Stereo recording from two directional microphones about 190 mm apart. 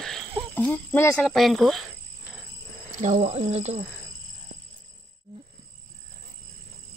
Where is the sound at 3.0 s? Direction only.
35° right (ahead or behind).